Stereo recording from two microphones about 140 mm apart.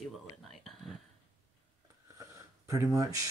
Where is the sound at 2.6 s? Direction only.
25° right (ahead or behind).